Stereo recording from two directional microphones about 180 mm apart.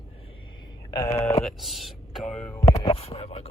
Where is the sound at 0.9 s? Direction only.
15° left (ahead or behind).